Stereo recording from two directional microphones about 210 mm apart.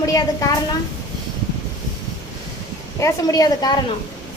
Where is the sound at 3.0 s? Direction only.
15° left (ahead or behind).